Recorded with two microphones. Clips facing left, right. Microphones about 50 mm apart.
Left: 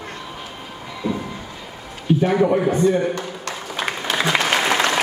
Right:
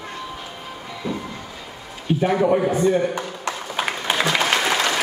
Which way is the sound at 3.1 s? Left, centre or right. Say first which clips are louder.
Right 1 dB; centre.